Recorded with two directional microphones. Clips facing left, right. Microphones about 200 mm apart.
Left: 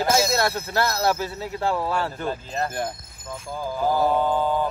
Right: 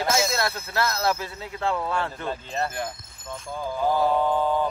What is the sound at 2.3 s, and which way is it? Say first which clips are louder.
Speech: left 1 dB; 5° left (ahead or behind).